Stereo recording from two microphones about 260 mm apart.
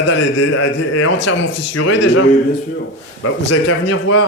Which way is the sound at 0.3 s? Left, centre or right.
Left.